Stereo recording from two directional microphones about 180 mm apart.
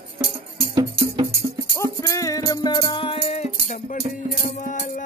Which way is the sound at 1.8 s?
20° left (ahead or behind).